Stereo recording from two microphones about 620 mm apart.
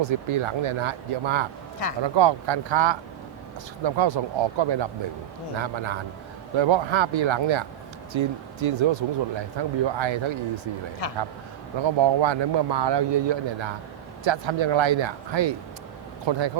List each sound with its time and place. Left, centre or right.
0.0 s speech: right
11.0 s a man's voice: left
11.9 s speech: right